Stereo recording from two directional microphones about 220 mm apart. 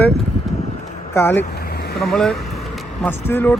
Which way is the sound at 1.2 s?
10° left (ahead or behind).